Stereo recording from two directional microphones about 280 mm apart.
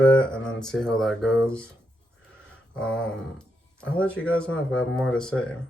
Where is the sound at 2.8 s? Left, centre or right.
Centre.